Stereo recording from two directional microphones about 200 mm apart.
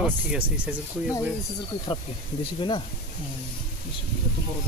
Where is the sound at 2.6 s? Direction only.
25° left (ahead or behind).